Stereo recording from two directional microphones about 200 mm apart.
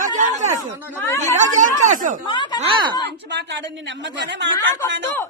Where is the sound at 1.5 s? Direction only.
40° right (ahead or behind).